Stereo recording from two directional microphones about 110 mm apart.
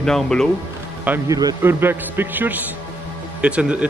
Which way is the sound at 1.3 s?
35° right (ahead or behind).